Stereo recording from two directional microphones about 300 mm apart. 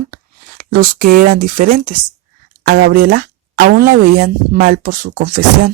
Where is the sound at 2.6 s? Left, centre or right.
Right.